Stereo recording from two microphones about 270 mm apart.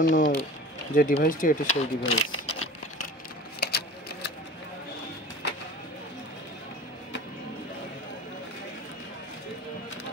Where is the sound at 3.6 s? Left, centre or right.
Left.